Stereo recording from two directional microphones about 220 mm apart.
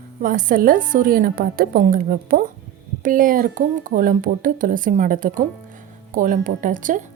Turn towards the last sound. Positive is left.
turn(degrees=-35)  # may be behind; listen again after turning